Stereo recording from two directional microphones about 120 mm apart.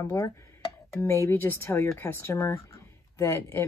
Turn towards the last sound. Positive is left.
turn(degrees=20)  # may be behind; listen again after turning